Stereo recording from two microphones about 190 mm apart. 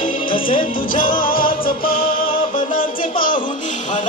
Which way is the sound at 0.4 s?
45° left (ahead or behind).